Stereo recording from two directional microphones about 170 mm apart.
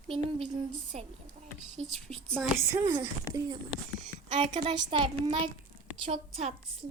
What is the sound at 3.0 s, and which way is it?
A woman's voice, 20° right (ahead or behind).